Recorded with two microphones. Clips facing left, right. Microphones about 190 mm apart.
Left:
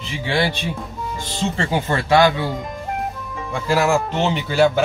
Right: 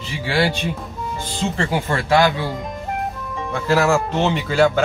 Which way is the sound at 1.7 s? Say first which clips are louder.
Left 1 dB; 20° left (ahead or behind).